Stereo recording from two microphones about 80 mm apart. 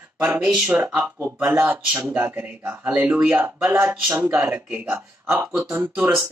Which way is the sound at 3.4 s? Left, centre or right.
Right.